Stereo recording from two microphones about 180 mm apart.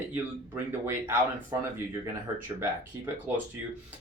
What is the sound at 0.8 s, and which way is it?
Speech, 15° right (ahead or behind).